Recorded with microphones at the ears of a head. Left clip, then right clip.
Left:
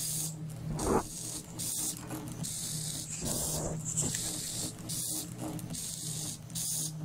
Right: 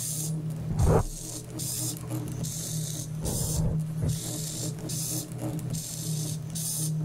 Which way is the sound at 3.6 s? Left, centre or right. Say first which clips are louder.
Right 1 dB; right.